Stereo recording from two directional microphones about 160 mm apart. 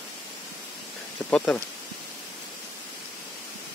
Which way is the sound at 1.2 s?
15° left (ahead or behind).